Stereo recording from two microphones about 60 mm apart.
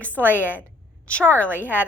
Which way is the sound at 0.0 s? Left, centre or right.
Left.